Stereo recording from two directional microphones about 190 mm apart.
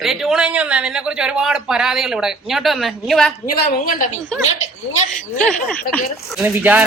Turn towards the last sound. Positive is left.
turn(degrees=-10)  # may be behind; listen again after turning